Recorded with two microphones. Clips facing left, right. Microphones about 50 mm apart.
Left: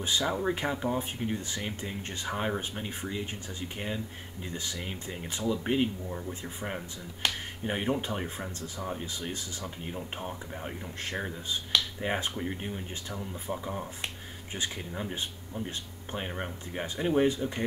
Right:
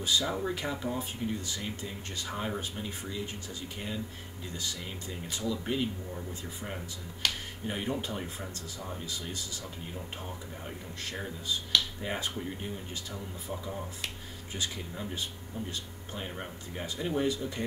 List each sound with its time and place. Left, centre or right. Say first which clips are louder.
0.2 s speech: left 3 dB; centre